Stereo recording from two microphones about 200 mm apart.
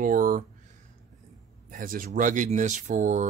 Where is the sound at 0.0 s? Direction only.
45° right (ahead or behind).